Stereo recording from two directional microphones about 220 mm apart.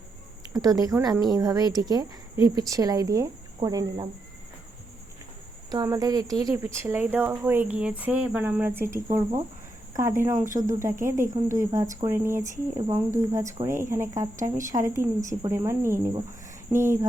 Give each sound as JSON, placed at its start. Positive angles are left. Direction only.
{"t": 0.5, "sound": "speech", "side_deg": -15}
{"t": 5.7, "sound": "speech", "side_deg": -15}